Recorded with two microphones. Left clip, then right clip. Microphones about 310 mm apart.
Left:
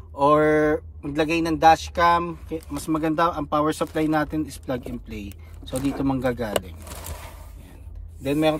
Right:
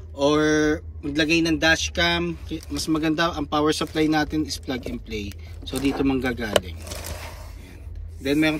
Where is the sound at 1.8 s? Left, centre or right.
Centre.